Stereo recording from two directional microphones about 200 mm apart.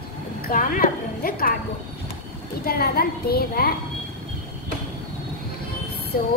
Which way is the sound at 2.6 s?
50° left (ahead or behind).